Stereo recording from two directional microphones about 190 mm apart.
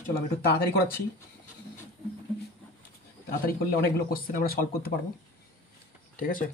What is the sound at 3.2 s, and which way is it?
Speech, 55° left (ahead or behind).